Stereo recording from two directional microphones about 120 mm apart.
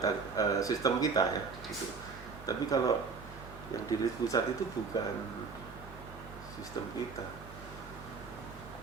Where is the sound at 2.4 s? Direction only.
30° left (ahead or behind).